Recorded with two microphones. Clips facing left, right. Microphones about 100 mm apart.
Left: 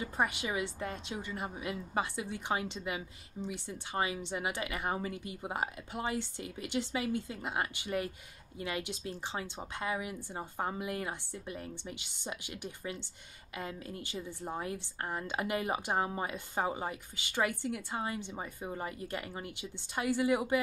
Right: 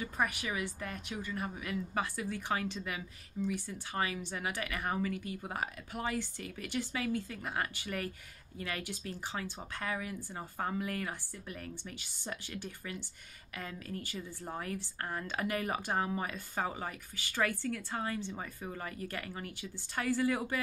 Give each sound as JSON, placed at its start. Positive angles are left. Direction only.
{"t": 0.0, "sound": "a woman's voice", "side_deg": 25}